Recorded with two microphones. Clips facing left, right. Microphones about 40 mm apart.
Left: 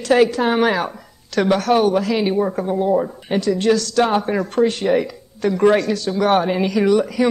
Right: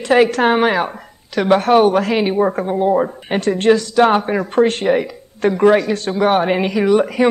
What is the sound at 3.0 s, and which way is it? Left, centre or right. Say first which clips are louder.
Speech: right 2 dB; right.